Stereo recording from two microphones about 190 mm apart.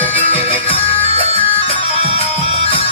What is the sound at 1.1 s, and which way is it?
Music, 35° right (ahead or behind).